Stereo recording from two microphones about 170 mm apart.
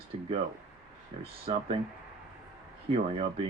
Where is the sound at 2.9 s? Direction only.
35° right (ahead or behind).